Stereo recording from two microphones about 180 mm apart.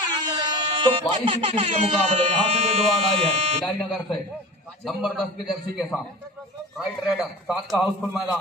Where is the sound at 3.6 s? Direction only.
Centre (ahead or behind).